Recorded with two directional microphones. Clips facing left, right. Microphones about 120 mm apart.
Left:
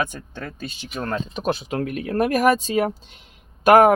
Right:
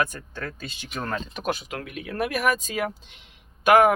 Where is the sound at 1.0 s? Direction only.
15° left (ahead or behind).